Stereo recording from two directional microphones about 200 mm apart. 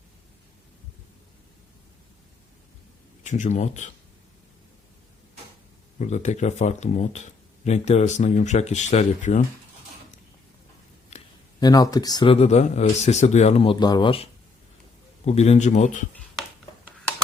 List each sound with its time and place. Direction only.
3.2 s speech: 35° left (ahead or behind)
6.0 s speech: 35° left (ahead or behind)
11.1 s a sound: 35° left (ahead or behind)
11.6 s speech: 20° left (ahead or behind); by 16.0 s 35° left (ahead or behind)